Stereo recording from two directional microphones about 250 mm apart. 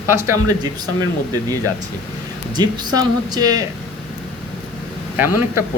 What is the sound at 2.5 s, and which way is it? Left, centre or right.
Speech, centre.